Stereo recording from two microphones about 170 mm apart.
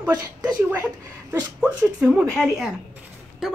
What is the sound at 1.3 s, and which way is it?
Speech, 5° right (ahead or behind).